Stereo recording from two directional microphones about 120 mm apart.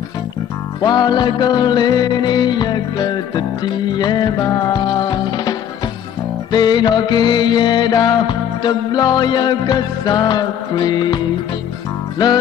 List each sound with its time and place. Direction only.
0.8 s music: 35° left (ahead or behind)